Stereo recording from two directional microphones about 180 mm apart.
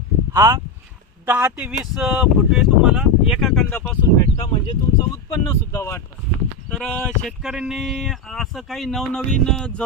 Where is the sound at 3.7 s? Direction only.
10° left (ahead or behind).